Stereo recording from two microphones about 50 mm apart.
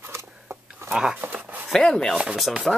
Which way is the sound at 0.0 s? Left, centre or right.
Right.